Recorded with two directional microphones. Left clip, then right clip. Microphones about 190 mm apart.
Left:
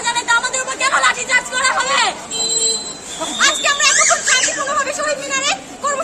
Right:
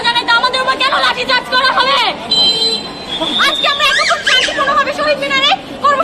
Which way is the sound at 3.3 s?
35° left (ahead or behind).